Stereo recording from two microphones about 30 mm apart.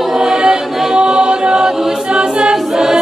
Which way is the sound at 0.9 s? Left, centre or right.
Right.